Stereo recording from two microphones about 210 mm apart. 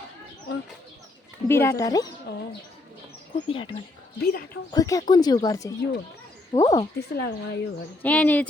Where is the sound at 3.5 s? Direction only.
25° left (ahead or behind).